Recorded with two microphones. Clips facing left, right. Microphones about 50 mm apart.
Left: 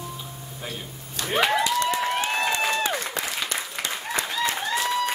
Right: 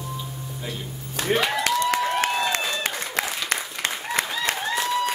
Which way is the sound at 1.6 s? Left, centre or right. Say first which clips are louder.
Right 1 dB; right.